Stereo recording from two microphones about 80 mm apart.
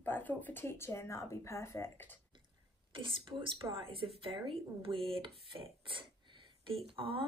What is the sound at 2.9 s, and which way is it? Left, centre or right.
Speech, right.